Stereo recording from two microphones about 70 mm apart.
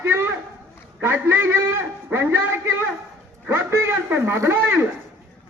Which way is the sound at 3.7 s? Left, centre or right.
Right.